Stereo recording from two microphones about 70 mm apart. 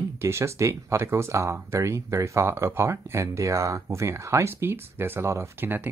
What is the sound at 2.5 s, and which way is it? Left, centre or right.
Speech, right.